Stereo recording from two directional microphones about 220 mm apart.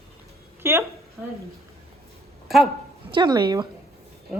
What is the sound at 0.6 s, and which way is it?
Speech, 10° right (ahead or behind).